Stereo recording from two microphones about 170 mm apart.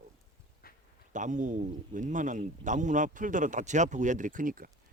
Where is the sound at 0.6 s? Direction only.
60° left (ahead or behind).